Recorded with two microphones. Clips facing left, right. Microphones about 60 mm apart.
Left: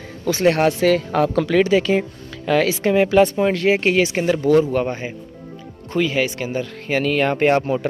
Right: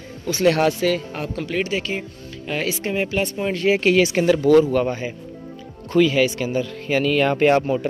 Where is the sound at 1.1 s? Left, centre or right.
Left.